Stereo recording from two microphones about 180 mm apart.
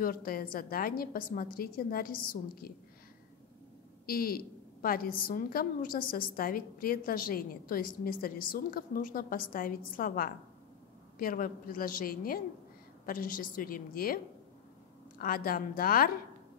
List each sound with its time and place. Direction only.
0.0 s a woman's voice: 55° left (ahead or behind)
4.0 s a woman's voice: 55° left (ahead or behind)